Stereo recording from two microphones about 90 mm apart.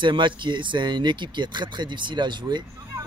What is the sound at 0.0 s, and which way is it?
Speech, 60° right (ahead or behind).